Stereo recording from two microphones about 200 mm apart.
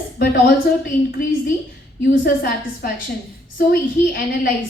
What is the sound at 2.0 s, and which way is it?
A woman's voice, 50° left (ahead or behind).